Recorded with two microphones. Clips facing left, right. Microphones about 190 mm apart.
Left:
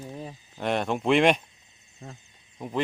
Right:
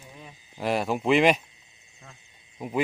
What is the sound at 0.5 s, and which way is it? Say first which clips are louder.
Speech: right 1 dB; 5° right (ahead or behind).